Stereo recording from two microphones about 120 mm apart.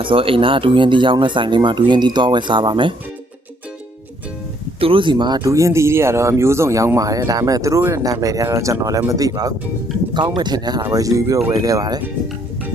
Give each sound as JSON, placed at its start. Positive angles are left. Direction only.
{"t": 0.0, "sound": "speech", "side_deg": -45}
{"t": 4.8, "sound": "speech", "side_deg": -45}